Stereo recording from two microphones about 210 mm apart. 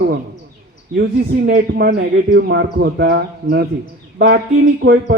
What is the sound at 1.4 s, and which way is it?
A man's voice, 45° right (ahead or behind).